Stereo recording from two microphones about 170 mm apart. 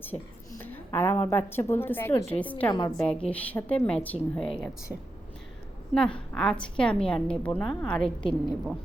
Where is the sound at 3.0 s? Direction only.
5° left (ahead or behind).